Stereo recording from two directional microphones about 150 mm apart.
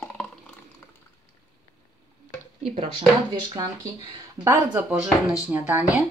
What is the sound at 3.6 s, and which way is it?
Speech, 25° right (ahead or behind).